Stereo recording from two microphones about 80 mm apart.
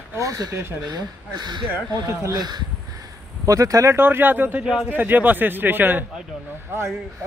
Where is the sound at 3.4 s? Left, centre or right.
Right.